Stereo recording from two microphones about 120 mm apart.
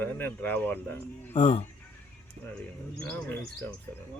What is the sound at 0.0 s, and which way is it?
Speech, 15° left (ahead or behind).